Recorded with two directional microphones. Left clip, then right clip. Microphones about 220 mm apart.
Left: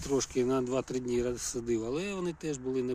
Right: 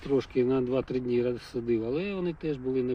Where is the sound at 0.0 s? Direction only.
10° left (ahead or behind).